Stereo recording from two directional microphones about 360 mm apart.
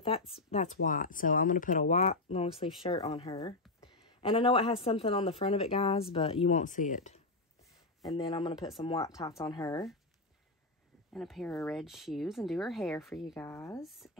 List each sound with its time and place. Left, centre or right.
0.5 s speech: centre
11.1 s speech: centre